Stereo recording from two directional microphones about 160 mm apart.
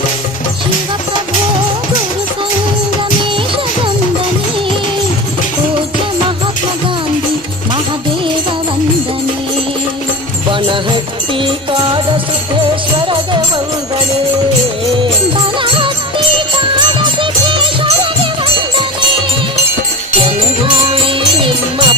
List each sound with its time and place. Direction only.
10.5 s music: 30° right (ahead or behind)
15.6 s music: 30° right (ahead or behind)
20.1 s music: 30° right (ahead or behind)